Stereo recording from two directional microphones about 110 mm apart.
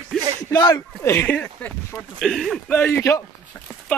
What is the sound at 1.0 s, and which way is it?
Speech, 25° left (ahead or behind).